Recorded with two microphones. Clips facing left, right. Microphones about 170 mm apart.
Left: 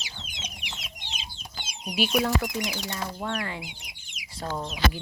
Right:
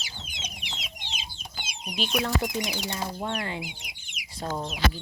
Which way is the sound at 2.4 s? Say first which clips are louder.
Right 1 dB; 25° right (ahead or behind).